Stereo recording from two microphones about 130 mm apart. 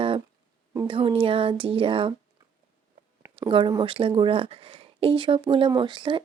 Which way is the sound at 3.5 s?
40° right (ahead or behind).